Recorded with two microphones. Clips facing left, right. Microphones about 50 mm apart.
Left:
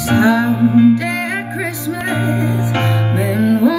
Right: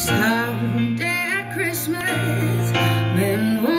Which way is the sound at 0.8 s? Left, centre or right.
Centre.